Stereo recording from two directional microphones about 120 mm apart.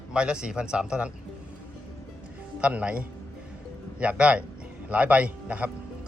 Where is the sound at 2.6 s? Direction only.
10° right (ahead or behind).